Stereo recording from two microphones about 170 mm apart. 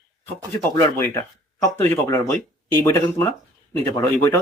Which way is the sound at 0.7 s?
20° left (ahead or behind).